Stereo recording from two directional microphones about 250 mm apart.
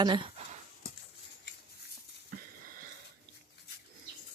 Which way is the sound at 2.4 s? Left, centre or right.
Right.